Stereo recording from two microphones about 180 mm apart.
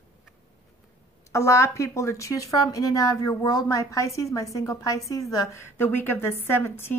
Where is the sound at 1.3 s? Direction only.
15° left (ahead or behind).